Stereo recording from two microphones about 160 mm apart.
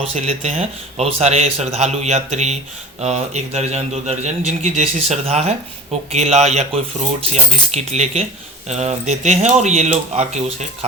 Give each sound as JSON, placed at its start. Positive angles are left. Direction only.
{"t": 0.0, "sound": "a man's voice", "side_deg": -45}